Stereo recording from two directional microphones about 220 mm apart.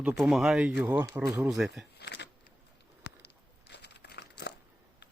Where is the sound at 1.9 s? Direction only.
50° left (ahead or behind).